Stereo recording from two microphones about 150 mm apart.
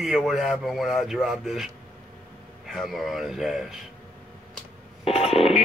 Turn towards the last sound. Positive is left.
turn(degrees=40)  # may be behind; listen again after turning